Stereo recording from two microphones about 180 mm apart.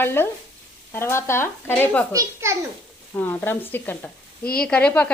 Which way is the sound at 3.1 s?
10° left (ahead or behind).